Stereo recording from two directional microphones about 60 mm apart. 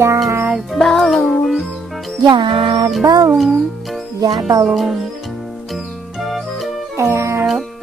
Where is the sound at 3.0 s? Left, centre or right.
Right.